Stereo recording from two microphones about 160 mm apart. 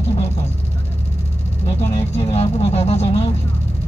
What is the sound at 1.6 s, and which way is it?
Speech, 30° left (ahead or behind).